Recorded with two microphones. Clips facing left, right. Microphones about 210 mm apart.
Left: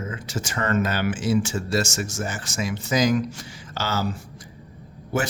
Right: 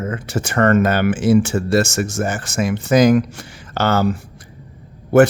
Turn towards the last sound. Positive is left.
turn(degrees=-60)  # may be behind; listen again after turning